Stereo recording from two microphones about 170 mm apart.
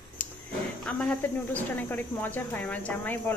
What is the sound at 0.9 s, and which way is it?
Speech, 10° left (ahead or behind).